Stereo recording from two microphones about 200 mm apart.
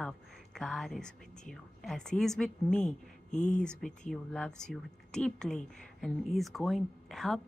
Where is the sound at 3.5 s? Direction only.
5° left (ahead or behind).